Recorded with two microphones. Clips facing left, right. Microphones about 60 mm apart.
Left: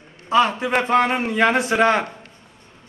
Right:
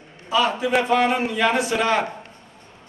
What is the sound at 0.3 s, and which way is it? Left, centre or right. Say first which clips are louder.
Speech: left 2 dB; left.